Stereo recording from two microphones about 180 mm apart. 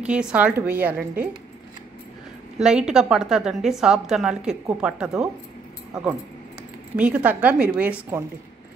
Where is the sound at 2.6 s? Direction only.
5° right (ahead or behind).